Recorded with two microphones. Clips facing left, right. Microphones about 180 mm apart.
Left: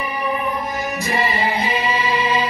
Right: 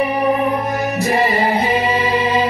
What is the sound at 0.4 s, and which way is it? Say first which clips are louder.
Music: right 6 dB; 65° right (ahead or behind).